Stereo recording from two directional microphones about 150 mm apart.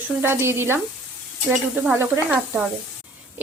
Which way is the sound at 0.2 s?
15° right (ahead or behind).